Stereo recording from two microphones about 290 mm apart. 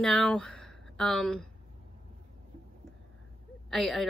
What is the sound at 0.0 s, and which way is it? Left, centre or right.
Speech, centre.